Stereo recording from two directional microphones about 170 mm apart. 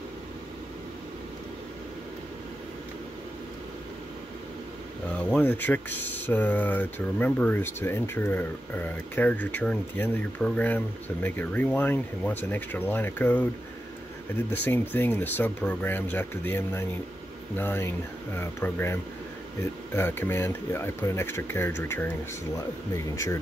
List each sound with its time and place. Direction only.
5.3 s speech: 10° left (ahead or behind)
20.0 s speech: 15° left (ahead or behind)